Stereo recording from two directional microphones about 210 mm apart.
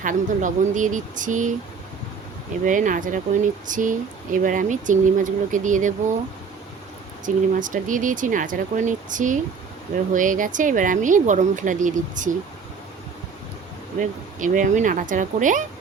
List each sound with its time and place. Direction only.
0.0 s speech: 40° right (ahead or behind)
2.6 s speech: 40° right (ahead or behind)
7.3 s speech: 40° right (ahead or behind)
14.0 s speech: 35° right (ahead or behind)